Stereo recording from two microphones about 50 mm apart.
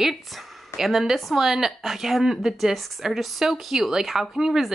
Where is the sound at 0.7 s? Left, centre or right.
Centre.